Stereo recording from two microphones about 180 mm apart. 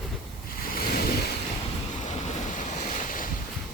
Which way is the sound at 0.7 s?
55° left (ahead or behind).